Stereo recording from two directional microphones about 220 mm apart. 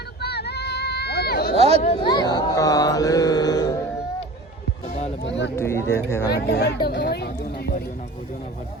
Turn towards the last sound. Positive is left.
turn(degrees=45)  # may be behind; listen again after turning